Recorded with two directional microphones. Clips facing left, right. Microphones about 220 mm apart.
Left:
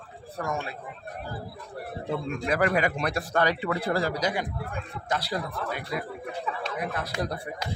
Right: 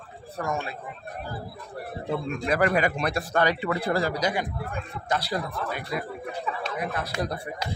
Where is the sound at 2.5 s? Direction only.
35° right (ahead or behind).